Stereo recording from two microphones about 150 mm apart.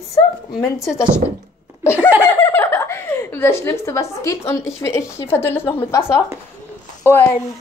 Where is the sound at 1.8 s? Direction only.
15° left (ahead or behind).